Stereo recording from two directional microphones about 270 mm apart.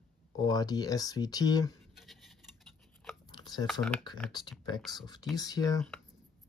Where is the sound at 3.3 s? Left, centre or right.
Centre.